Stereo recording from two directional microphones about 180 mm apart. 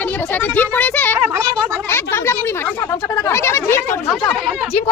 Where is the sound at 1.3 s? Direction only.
15° right (ahead or behind).